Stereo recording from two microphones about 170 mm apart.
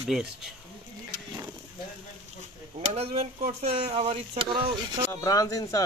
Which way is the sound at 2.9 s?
40° right (ahead or behind).